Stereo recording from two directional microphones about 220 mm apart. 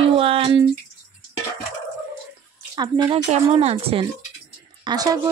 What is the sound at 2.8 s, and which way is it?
Speech, 20° right (ahead or behind).